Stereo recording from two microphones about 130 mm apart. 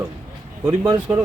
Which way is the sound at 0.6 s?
15° right (ahead or behind).